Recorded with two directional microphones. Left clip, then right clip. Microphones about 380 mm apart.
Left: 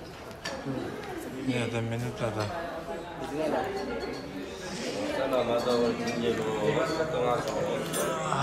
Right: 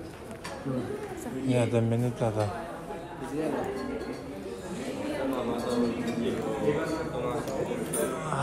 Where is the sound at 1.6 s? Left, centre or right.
Centre.